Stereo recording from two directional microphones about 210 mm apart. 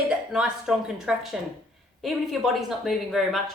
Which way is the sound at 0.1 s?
5° right (ahead or behind).